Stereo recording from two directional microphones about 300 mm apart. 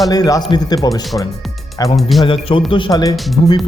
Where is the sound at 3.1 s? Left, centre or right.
Centre.